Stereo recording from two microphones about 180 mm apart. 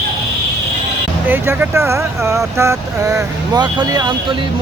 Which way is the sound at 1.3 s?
10° right (ahead or behind).